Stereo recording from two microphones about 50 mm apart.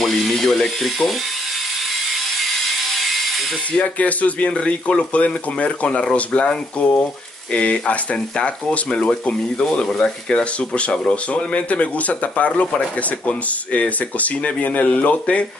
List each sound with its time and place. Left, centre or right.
0.0 s speech: centre
2.4 s a sound: centre
3.8 s speech: left